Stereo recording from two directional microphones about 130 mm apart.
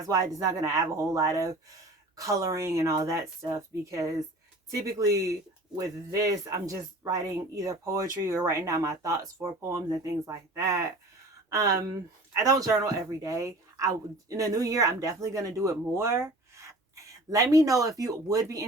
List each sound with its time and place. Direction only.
0.0 s speech: 25° right (ahead or behind)